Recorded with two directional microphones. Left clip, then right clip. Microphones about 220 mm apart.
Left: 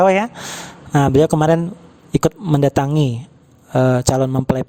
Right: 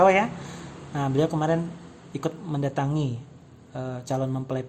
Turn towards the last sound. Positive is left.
turn(degrees=50)  # may be behind; listen again after turning